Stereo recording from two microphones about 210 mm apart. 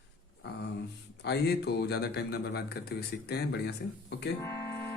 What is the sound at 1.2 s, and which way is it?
A man's voice, 50° left (ahead or behind).